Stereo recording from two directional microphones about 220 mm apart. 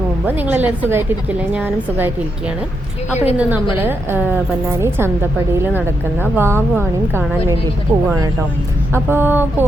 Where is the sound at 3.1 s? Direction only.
30° left (ahead or behind).